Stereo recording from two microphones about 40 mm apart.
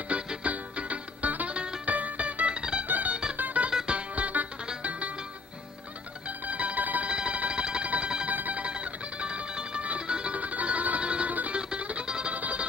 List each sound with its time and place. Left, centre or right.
0.4 s music: right
1.5 s music: right
1.9 s music: right
2.9 s music: right
6.2 s music: right
7.1 s a sound: right
7.9 s music: right
8.3 s music: right
8.6 s music: right
10.4 s music: right
11.0 s music: right
11.2 s music: right
11.5 s music: right
12.4 s music: right